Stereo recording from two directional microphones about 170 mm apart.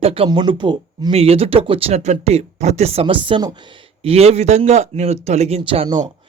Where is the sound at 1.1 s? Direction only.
35° right (ahead or behind).